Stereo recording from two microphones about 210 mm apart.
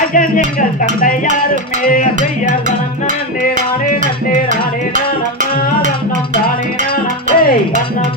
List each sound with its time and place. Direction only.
0.1 s music: 40° left (ahead or behind)
7.3 s music: 45° left (ahead or behind)